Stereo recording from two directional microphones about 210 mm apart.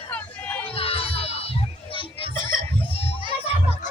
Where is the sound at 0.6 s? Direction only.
25° left (ahead or behind).